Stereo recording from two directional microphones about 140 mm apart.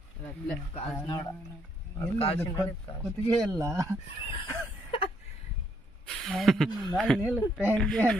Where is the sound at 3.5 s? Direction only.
20° right (ahead or behind).